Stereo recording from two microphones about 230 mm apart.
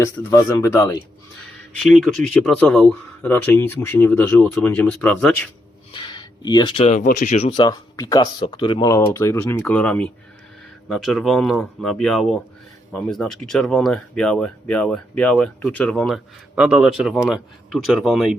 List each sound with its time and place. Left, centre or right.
0.0 s speech: centre
1.9 s speech: centre
5.9 s speech: centre